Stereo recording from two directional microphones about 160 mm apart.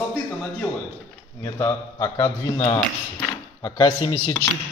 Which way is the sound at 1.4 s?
20° left (ahead or behind).